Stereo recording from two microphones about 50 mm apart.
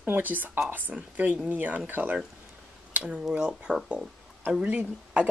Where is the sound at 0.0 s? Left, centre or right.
Right.